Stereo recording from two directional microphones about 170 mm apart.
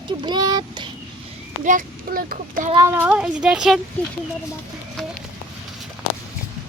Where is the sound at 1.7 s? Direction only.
55° right (ahead or behind).